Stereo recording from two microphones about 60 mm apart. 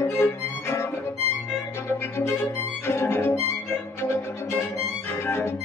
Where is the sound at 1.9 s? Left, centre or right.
Left.